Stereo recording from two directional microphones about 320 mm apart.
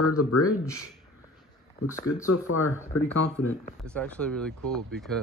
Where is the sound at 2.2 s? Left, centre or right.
Left.